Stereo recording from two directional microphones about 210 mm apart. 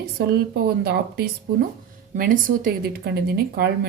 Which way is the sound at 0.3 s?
50° right (ahead or behind).